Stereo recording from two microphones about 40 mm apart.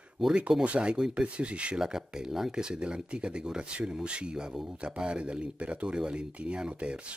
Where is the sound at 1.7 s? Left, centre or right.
Centre.